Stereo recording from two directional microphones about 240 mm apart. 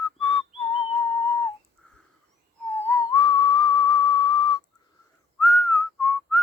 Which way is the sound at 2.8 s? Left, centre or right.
Centre.